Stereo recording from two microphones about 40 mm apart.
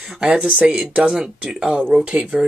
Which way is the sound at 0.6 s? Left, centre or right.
Centre.